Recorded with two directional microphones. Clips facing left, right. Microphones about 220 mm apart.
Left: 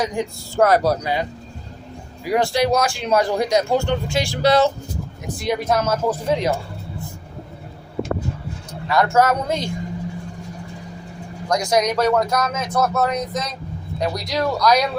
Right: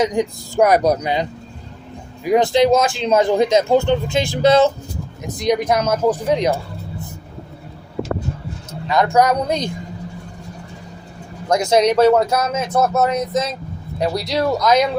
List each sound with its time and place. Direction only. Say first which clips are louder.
0.0 s speech: right 5 dB; 20° right (ahead or behind)
8.9 s speech: right 2 dB; 20° right (ahead or behind)
11.4 s speech: right 4 dB; 25° right (ahead or behind)